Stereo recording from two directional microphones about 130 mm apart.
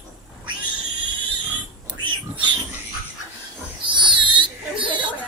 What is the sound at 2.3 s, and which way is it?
Pig, 40° right (ahead or behind).